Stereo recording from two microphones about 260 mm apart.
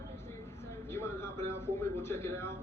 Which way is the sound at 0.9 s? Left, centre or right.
Centre.